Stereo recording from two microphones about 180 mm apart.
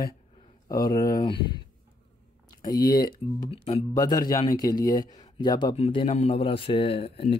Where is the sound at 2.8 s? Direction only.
55° left (ahead or behind).